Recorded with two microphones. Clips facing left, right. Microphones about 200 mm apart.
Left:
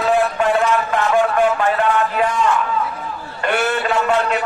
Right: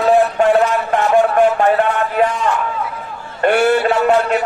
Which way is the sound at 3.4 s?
40° right (ahead or behind).